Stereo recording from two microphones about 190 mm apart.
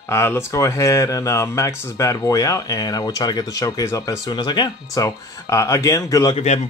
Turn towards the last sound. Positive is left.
turn(degrees=35)  # may be behind; listen again after turning